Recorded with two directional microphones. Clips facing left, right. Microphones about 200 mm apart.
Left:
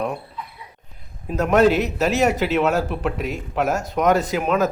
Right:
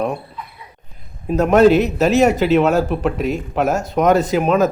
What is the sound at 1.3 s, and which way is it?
Speech, 30° right (ahead or behind).